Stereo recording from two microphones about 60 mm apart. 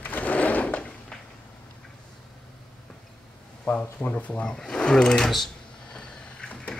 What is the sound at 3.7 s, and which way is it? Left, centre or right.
Speech, left.